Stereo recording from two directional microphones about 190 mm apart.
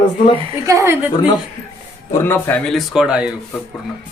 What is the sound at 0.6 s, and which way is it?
Speech, 15° right (ahead or behind).